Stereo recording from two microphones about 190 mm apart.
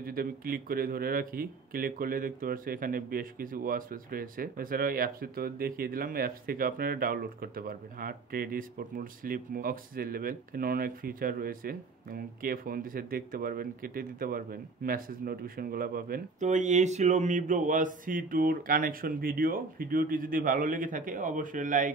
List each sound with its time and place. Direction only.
0.0 s speech: 50° right (ahead or behind)